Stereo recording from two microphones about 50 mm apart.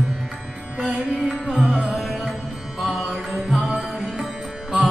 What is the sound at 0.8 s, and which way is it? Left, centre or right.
Music, centre.